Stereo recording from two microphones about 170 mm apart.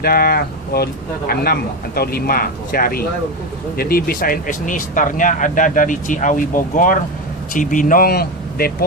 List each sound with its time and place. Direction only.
0.0 s speech: 65° left (ahead or behind)